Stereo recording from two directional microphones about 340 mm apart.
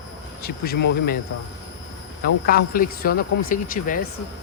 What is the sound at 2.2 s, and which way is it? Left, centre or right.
Speech, left.